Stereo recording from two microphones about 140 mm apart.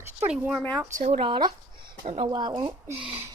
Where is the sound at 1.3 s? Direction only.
30° right (ahead or behind).